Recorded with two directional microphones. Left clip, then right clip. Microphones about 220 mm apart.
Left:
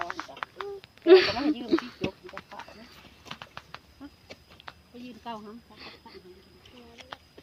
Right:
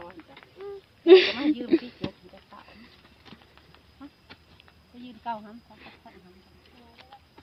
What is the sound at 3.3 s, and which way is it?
Patter, 40° left (ahead or behind).